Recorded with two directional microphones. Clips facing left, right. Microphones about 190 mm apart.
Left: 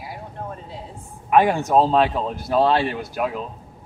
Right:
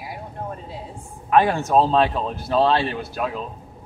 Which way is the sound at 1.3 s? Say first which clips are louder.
Left 1 dB; 15° left (ahead or behind).